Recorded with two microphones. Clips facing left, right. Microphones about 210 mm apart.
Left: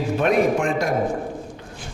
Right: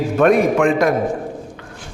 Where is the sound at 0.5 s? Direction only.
90° right.